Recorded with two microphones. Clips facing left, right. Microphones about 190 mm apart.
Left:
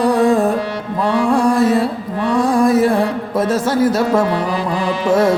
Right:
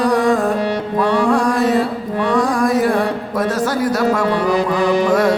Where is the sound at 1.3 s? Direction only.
25° left (ahead or behind).